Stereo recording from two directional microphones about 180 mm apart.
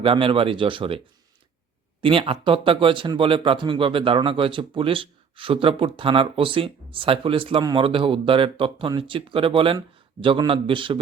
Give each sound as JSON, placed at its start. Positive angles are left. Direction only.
{"t": 0.0, "sound": "speech", "side_deg": -30}